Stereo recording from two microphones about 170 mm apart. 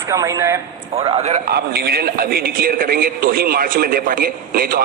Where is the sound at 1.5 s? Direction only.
65° right (ahead or behind).